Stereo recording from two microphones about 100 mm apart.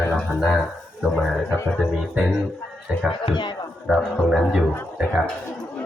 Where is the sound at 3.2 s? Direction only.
55° left (ahead or behind).